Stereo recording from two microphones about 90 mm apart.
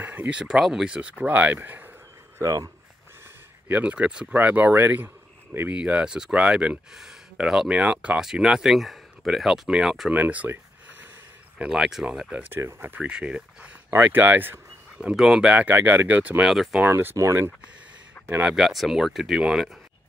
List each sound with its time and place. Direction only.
0.0 s speech: 20° right (ahead or behind)
2.3 s speech: 40° right (ahead or behind)
3.6 s speech: 15° right (ahead or behind)
5.8 s speech: 10° right (ahead or behind)
10.1 s a sound: 20° right (ahead or behind)
11.5 s speech: 10° right (ahead or behind)
12.5 s speech: 25° right (ahead or behind)
13.0 s speech: 10° right (ahead or behind)
15.0 s speech: 5° right (ahead or behind)
15.7 s speech: 25° right (ahead or behind)
18.4 s speech: 5° right (ahead or behind)